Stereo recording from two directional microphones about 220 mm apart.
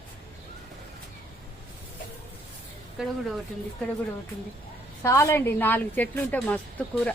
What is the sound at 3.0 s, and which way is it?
Speech, 5° right (ahead or behind).